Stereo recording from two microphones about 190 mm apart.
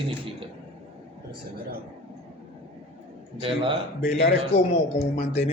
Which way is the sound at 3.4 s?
25° right (ahead or behind).